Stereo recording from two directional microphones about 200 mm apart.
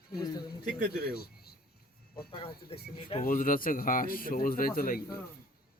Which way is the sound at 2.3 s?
25° left (ahead or behind).